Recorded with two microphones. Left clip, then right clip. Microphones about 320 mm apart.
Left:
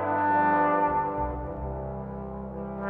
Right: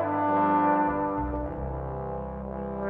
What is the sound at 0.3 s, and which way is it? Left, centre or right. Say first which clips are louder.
Brass instrument: left 1 dB; centre.